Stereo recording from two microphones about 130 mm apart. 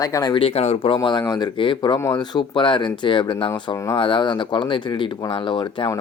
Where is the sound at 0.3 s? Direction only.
50° left (ahead or behind).